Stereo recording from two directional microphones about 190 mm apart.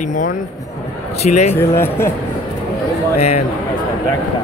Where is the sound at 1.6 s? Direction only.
15° left (ahead or behind).